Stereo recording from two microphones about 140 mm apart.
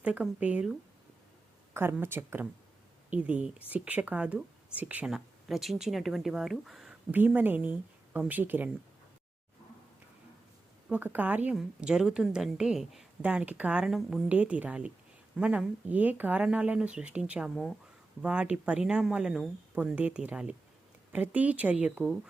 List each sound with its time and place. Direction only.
0.0 s speech: 10° right (ahead or behind)
1.7 s speech: 15° right (ahead or behind)
7.1 s speech: 15° right (ahead or behind)
10.8 s a woman's voice: 10° right (ahead or behind)